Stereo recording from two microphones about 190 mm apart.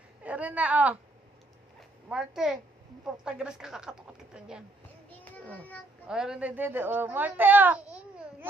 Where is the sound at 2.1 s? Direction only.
5° right (ahead or behind).